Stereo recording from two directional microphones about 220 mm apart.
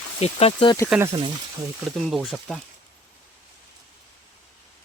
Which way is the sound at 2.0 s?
Centre (ahead or behind).